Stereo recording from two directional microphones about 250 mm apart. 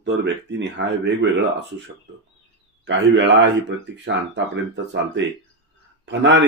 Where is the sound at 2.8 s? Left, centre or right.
Right.